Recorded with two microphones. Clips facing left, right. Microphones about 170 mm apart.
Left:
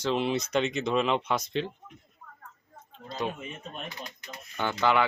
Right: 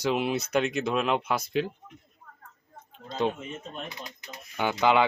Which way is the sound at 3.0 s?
20° right (ahead or behind).